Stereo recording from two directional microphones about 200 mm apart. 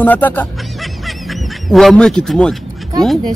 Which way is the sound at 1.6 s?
Centre (ahead or behind).